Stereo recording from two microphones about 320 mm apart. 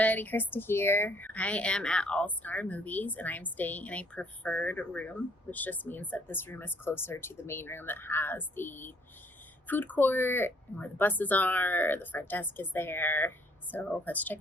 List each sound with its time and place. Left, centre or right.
0.0 s speech: centre